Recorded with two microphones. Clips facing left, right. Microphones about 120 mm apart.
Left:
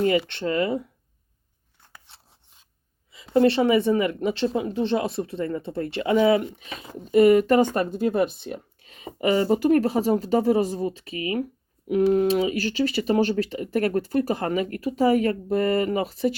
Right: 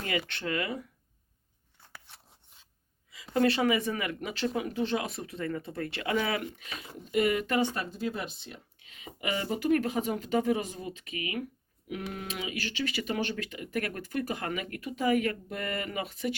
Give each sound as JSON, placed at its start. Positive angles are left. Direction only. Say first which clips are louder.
{"t": 0.3, "sound": "speech", "louder": "left 9 dB", "side_deg": 30}
{"t": 1.9, "sound": "filing", "louder": "even", "side_deg": 20}
{"t": 3.1, "sound": "speech", "louder": "left 7 dB", "side_deg": 30}
{"t": 7.0, "sound": "speech", "louder": "left 11 dB", "side_deg": 40}
{"t": 8.8, "sound": "speech", "louder": "left 11 dB", "side_deg": 40}